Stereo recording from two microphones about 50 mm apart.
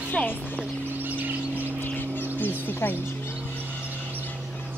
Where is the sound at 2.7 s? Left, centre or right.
Left.